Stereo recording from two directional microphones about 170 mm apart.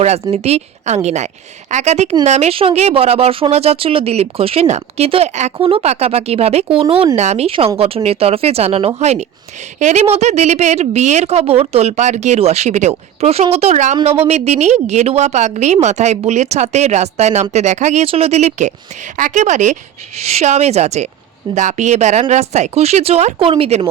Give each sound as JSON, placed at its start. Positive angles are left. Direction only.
{"t": 0.0, "sound": "speech", "side_deg": -40}
{"t": 6.8, "sound": "speech", "side_deg": -20}
{"t": 7.2, "sound": "speech", "side_deg": -40}